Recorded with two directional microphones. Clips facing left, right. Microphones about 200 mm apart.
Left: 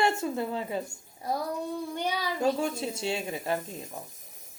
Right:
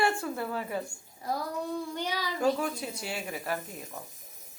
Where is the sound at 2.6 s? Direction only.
25° left (ahead or behind).